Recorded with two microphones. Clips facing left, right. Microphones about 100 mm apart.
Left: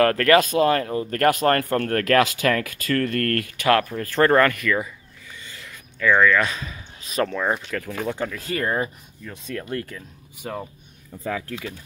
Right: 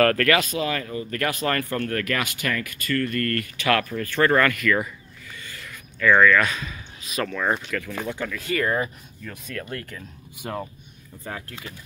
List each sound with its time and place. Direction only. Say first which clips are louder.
0.0 s speech: left 2 dB; 30° left (ahead or behind)
0.4 s speech: left 7 dB; 45° left (ahead or behind)
2.0 s speech: left 8 dB; 90° left; by 3.6 s 65° left (ahead or behind)
3.6 s speech: left 3 dB; 35° left (ahead or behind)
5.3 s a sound: right 1 dB; 20° left (ahead or behind)
6.5 s a man's voice: right 1 dB; 30° left (ahead or behind)
7.3 s speech: left 1 dB; 10° left (ahead or behind)
7.7 s speech: left 2 dB; 40° left (ahead or behind)
10.4 s speech: even; centre (ahead or behind)